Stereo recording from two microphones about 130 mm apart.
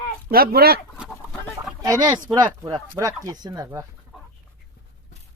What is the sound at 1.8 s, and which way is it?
Speech, 25° right (ahead or behind).